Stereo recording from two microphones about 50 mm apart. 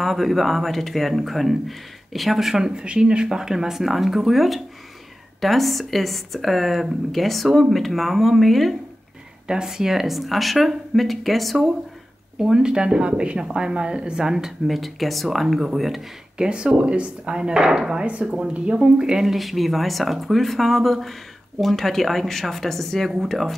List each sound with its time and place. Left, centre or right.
0.0 s speech: centre
9.5 s speech: centre
12.4 s a woman's voice: centre
14.7 s speech: centre
16.3 s a woman's voice: centre
18.0 s speech: right
19.2 s speech: centre